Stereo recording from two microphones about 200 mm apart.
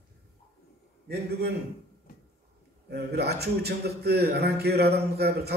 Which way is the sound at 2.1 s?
45° left (ahead or behind).